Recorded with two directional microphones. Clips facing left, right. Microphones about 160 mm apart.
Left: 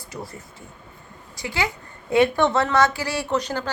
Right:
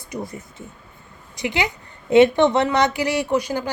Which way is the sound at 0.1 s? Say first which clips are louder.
Right 6 dB; 20° right (ahead or behind).